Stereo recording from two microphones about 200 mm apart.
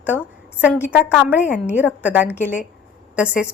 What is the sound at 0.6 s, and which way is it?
Speech, 10° left (ahead or behind).